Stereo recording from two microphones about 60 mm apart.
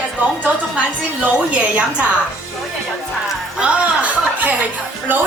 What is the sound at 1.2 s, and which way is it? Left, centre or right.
Speech, right.